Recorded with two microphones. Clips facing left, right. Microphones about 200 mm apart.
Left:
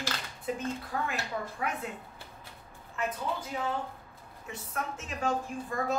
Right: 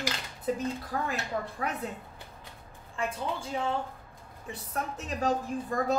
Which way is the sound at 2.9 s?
30° right (ahead or behind).